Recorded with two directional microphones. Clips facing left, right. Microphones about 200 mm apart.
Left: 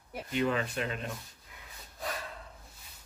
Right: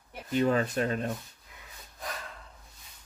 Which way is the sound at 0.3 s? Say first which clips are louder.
Right 5 dB; 40° right (ahead or behind).